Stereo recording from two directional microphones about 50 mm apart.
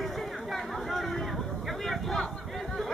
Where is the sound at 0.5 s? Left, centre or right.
Centre.